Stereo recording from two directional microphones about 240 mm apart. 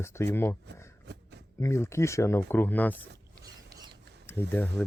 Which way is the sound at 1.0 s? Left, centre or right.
Right.